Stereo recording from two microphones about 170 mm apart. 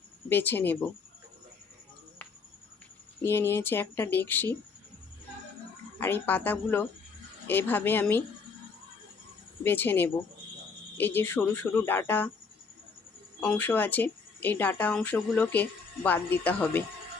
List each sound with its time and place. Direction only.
0.3 s speech: 10° left (ahead or behind)
3.2 s speech: 15° left (ahead or behind)
6.0 s speech: 10° left (ahead or behind)
9.6 s speech: 10° left (ahead or behind)
13.4 s speech: 10° left (ahead or behind)